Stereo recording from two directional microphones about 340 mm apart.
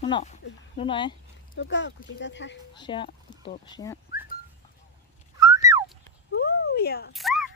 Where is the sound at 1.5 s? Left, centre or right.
Left.